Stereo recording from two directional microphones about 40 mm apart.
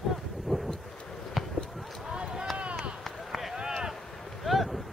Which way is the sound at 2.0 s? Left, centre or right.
Centre.